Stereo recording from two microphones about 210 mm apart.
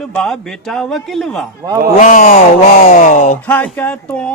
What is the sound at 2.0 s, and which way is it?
Speech, 40° left (ahead or behind).